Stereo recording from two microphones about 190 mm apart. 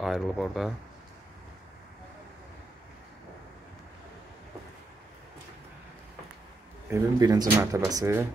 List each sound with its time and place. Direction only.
0.0 s speech: centre (ahead or behind)
6.9 s speech: 20° right (ahead or behind)